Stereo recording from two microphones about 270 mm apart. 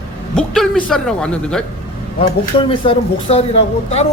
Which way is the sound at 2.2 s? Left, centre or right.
Centre.